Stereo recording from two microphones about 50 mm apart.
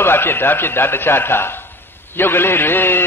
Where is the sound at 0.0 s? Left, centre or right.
Left.